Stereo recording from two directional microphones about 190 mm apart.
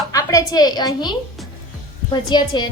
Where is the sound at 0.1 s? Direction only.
15° left (ahead or behind).